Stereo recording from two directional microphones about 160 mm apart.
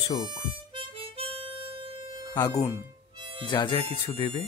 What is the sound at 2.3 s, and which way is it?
Speech, 20° left (ahead or behind).